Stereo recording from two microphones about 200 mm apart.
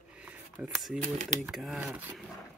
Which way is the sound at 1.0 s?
40° right (ahead or behind).